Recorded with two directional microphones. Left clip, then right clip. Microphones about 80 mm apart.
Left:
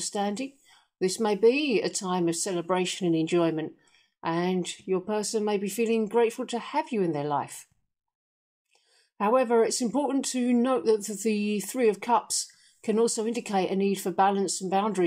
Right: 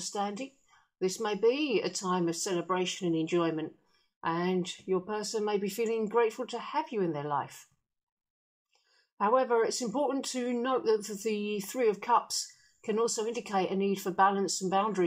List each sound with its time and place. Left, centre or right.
0.0 s speech: left
4.2 s speech: left
9.2 s speech: left